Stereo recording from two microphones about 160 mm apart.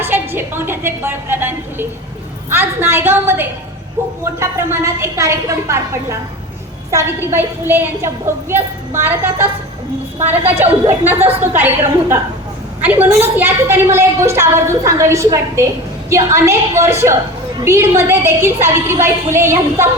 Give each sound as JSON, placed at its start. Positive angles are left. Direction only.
{"t": 0.0, "sound": "a woman's voice", "side_deg": -15}